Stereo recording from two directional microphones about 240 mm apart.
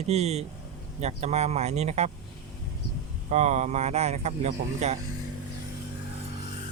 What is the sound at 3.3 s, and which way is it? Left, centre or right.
Speech, right.